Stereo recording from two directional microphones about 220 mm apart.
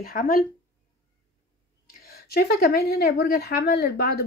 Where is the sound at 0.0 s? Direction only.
40° left (ahead or behind).